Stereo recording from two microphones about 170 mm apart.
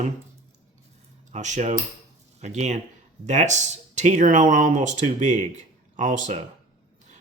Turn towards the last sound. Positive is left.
turn(degrees=-45)  # may be behind; listen again after turning